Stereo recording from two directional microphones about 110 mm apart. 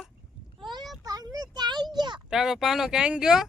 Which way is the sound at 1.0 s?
35° right (ahead or behind).